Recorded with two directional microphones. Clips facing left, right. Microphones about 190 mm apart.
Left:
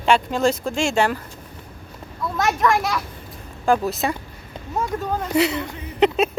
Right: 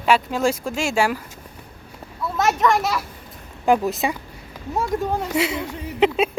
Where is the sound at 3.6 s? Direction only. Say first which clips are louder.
Right 1 dB; 15° right (ahead or behind).